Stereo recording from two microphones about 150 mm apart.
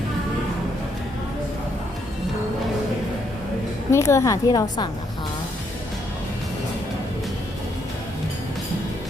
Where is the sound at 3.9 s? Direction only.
20° left (ahead or behind).